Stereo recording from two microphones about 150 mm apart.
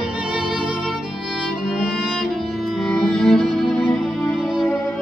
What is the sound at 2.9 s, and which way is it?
Music, 5° left (ahead or behind).